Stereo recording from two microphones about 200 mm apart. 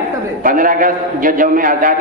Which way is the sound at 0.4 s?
45° right (ahead or behind).